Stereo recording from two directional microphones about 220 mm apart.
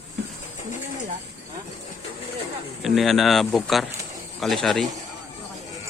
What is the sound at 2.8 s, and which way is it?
Speech, centre (ahead or behind).